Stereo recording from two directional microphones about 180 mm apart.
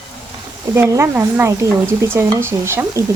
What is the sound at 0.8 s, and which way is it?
Speech, 15° right (ahead or behind).